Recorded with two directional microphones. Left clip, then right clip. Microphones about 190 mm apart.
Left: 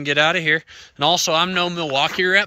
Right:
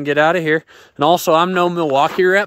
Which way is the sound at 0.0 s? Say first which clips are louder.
Right 3 dB; 25° right (ahead or behind).